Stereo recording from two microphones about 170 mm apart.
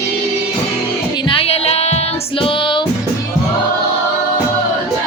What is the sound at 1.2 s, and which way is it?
Music, 35° left (ahead or behind).